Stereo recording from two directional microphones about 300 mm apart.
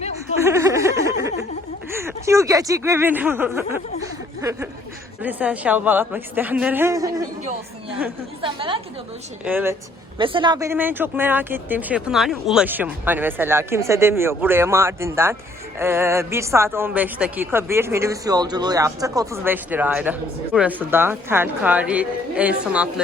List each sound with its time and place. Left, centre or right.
0.4 s a sound: centre
1.9 s speech: centre
4.4 s a sound: centre
5.2 s a woman's voice: centre
8.4 s speech: centre
9.4 s speech: centre